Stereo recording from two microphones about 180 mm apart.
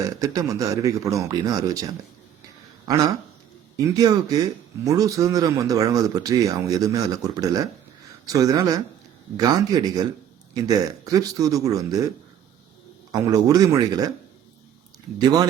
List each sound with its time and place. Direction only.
0.0 s speech: 20° right (ahead or behind)
13.1 s speech: 20° right (ahead or behind)
15.2 s speech: 20° right (ahead or behind)